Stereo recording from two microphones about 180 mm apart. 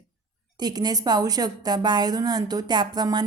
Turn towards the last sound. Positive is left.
turn(degrees=-25)  # may be behind; listen again after turning